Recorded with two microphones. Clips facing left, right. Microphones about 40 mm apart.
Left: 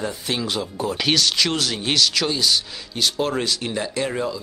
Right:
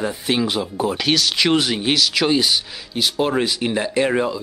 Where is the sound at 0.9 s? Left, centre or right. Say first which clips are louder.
Left 2 dB; centre.